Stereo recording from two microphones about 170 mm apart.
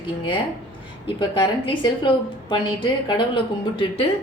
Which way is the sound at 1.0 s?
30° left (ahead or behind).